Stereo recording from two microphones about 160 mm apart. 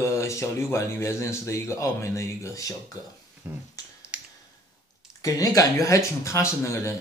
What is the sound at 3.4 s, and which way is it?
Finger snapping, 15° right (ahead or behind).